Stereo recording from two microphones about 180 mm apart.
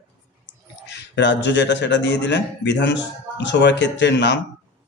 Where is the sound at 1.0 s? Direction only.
75° left (ahead or behind).